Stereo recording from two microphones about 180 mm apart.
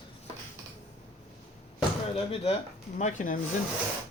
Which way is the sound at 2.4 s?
40° left (ahead or behind).